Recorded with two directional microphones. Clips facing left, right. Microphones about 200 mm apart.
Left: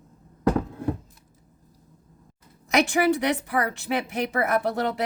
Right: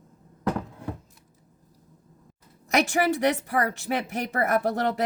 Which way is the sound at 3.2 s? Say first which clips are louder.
Right 1 dB; 45° right (ahead or behind).